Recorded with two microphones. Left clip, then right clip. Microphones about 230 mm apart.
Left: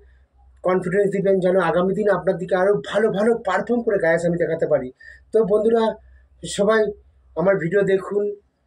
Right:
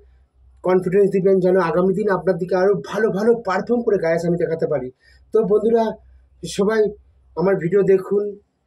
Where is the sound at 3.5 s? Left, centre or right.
Centre.